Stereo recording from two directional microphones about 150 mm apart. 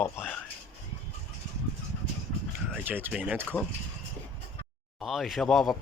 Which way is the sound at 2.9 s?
15° right (ahead or behind).